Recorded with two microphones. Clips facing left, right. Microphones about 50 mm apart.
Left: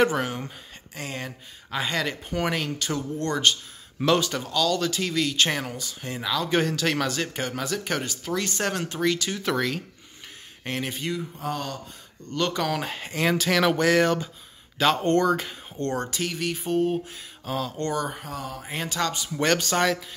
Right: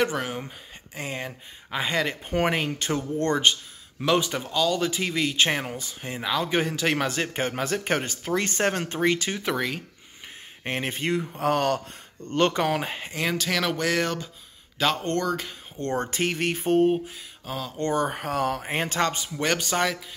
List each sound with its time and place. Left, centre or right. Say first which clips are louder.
0.0 s speech: left 3 dB; centre
0.9 s speech: right 1 dB; centre
2.2 s speech: right 2 dB; right
4.2 s speech: even; centre
9.4 s speech: left 1 dB; centre
10.6 s speech: right 2 dB; right
12.3 s speech: right 4 dB; right
12.6 s speech: right 2 dB; centre
13.1 s speech: left 4 dB; centre
15.9 s speech: right 4 dB; right
17.5 s speech: left 3 dB; centre
18.1 s speech: right 8 dB; right
18.6 s speech: right 3 dB; right
19.3 s speech: left 6 dB; centre